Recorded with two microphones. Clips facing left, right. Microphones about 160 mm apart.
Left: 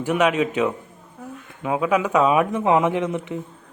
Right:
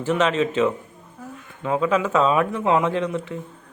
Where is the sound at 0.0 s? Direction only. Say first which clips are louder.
Left 1 dB; 10° left (ahead or behind).